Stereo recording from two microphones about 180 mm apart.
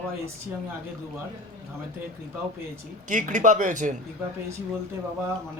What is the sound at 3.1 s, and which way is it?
Speech, 45° right (ahead or behind).